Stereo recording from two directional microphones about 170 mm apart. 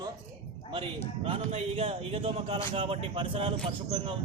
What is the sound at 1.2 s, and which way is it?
Speech, 35° right (ahead or behind).